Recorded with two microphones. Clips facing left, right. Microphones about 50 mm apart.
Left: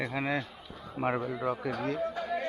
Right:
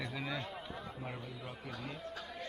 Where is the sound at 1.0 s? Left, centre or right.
Left.